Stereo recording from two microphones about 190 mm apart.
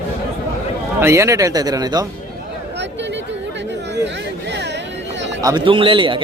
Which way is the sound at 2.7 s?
65° right (ahead or behind).